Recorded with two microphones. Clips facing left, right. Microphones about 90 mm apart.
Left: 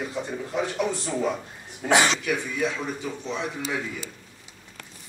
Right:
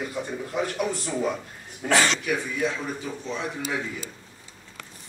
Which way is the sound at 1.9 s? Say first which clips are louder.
Left 1 dB; 15° left (ahead or behind).